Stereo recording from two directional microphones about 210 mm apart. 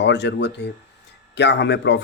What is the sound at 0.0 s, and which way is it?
Speech, 55° left (ahead or behind).